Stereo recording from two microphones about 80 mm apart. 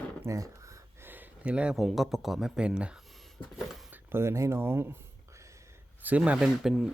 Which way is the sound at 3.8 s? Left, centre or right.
Right.